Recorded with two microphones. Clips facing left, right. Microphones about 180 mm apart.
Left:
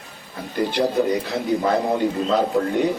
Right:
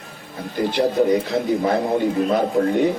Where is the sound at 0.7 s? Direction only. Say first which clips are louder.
Right 3 dB; 55° right (ahead or behind).